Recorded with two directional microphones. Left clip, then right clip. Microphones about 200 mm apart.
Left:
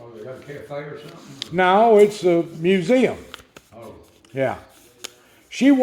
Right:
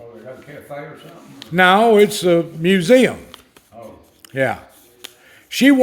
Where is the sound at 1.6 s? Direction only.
45° right (ahead or behind).